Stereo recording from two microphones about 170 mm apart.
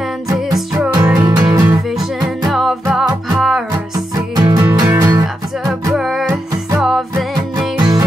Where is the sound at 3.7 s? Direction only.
20° right (ahead or behind).